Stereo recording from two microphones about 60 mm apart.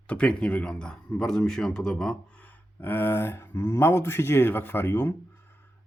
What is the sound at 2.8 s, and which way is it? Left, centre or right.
Speech, left.